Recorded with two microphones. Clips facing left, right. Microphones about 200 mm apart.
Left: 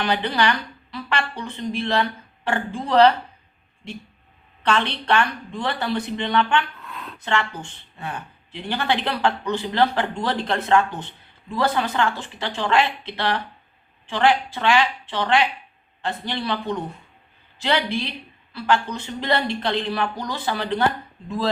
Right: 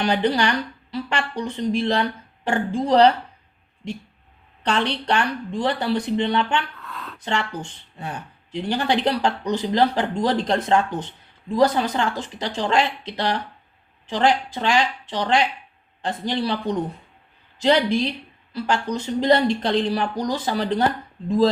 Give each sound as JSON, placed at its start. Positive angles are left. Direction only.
{"t": 0.0, "sound": "speech", "side_deg": -40}
{"t": 4.7, "sound": "speech", "side_deg": -35}
{"t": 6.8, "sound": "a sound", "side_deg": 15}
{"t": 7.3, "sound": "speech", "side_deg": -35}